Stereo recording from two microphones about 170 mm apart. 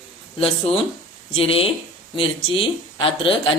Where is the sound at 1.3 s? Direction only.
35° left (ahead or behind).